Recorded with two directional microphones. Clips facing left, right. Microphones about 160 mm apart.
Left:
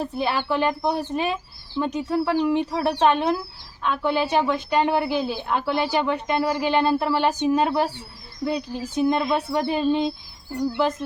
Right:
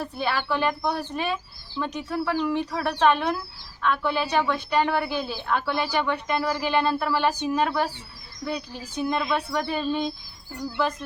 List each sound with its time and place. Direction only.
0.0 s speech: 25° left (ahead or behind)